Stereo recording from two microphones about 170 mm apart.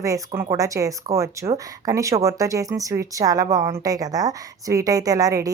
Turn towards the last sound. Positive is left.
turn(degrees=-20)  # may be behind; listen again after turning